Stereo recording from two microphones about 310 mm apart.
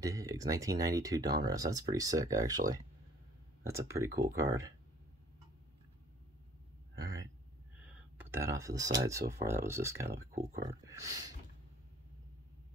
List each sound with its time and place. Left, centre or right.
0.0 s speech: centre
3.6 s speech: centre
7.0 s a sound: centre
8.2 s speech: centre
10.3 s speech: right
10.7 s speech: centre